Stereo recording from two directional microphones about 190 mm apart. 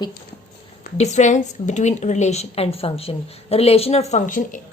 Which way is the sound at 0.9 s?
35° left (ahead or behind).